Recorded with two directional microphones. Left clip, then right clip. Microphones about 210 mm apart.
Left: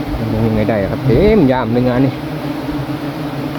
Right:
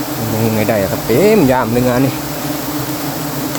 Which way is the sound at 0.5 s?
20° right (ahead or behind).